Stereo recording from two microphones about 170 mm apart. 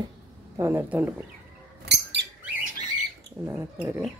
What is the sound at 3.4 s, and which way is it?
Speech, 15° right (ahead or behind).